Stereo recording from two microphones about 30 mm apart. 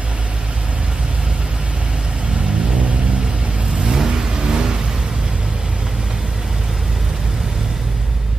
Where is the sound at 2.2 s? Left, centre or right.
Right.